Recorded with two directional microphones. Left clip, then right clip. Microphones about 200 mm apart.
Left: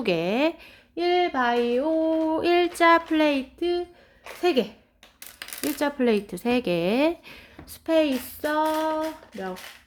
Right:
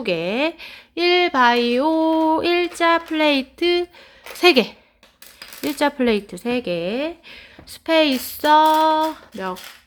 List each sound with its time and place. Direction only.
0.0 s a woman's voice: centre (ahead or behind)
0.6 s a sound: 20° right (ahead or behind)
2.3 s speech: 10° right (ahead or behind)
3.6 s a sound: 25° right (ahead or behind)
5.8 s a woman's voice: 10° right (ahead or behind); by 7.4 s 15° left (ahead or behind)
7.7 s speech: 10° right (ahead or behind)
8.4 s a sound: 25° right (ahead or behind)
8.7 s child singing: 30° right (ahead or behind)
9.3 s speech: 55° right (ahead or behind)